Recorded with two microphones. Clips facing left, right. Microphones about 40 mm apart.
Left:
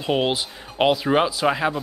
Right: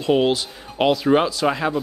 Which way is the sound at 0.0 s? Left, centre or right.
Centre.